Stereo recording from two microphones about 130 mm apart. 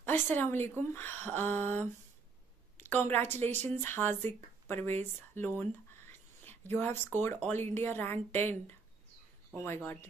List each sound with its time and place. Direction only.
0.0 s a woman's voice: 15° left (ahead or behind)